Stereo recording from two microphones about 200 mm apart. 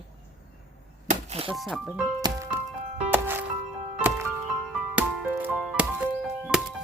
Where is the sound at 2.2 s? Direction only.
15° right (ahead or behind).